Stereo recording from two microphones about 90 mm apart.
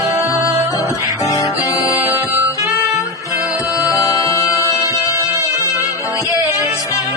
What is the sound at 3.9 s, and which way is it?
Music, 40° left (ahead or behind).